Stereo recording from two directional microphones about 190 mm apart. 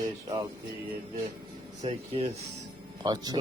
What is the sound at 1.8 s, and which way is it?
Speech, 30° right (ahead or behind).